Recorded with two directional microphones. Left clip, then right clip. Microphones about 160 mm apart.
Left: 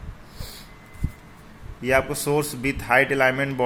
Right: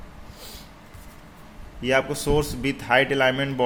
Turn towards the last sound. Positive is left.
turn(degrees=0)  # may be behind; listen again after turning